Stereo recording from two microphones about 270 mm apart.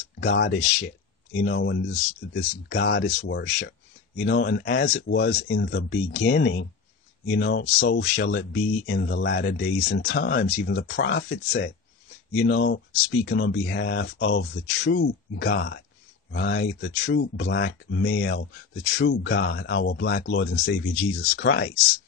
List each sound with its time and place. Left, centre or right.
0.2 s speech: left